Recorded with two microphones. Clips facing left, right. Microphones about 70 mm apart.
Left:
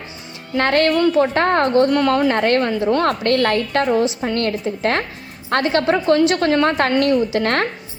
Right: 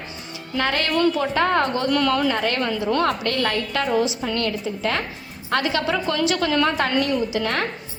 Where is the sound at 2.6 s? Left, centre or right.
Left.